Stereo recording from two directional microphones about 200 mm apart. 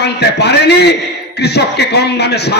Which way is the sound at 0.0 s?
55° left (ahead or behind).